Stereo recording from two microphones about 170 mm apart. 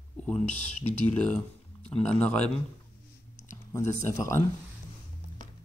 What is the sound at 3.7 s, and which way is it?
Speech, 15° left (ahead or behind).